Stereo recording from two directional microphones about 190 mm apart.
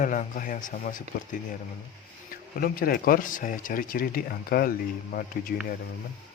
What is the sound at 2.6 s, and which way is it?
Speech, 50° left (ahead or behind).